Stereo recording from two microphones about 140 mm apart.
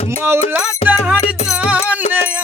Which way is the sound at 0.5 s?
5° right (ahead or behind).